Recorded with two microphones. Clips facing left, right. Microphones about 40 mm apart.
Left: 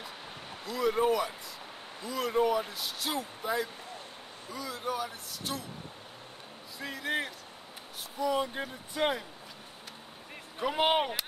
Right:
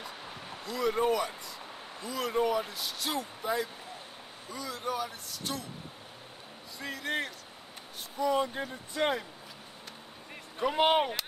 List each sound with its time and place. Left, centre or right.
0.0 s a sound: centre
2.0 s speech: centre
6.8 s speech: centre
10.6 s speech: centre